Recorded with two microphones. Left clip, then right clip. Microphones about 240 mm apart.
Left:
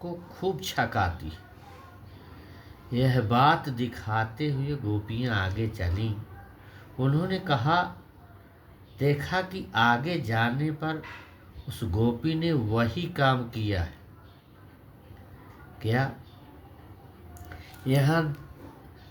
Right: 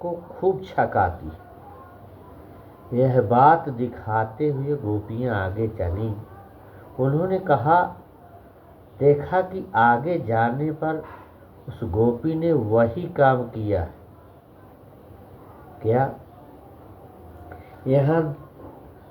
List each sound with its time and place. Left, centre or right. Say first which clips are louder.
0.4 s speech: right 7 dB; left
2.9 s speech: right 8 dB; left
9.0 s speech: right 9 dB; left
15.8 s speech: right 8 dB; left
17.8 s speech: right 6 dB; left